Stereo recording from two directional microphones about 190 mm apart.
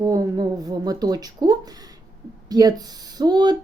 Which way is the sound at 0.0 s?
20° right (ahead or behind).